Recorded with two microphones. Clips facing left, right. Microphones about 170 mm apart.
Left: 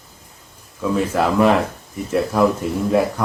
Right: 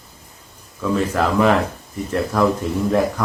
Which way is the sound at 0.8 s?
5° left (ahead or behind).